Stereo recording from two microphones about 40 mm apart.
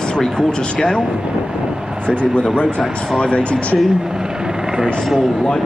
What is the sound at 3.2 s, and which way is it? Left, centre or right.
Speech, left.